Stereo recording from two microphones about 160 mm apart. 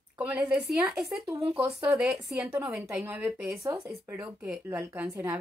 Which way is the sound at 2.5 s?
15° right (ahead or behind).